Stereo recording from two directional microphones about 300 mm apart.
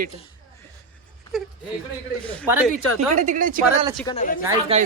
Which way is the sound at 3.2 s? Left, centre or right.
Right.